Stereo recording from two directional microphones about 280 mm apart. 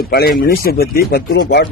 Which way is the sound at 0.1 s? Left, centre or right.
Left.